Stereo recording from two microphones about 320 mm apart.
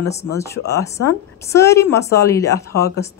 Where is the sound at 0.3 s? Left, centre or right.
Centre.